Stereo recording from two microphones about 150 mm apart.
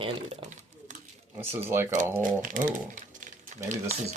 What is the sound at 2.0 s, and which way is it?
Speech, 60° right (ahead or behind).